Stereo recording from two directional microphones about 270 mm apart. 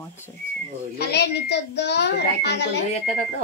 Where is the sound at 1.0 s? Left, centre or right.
Left.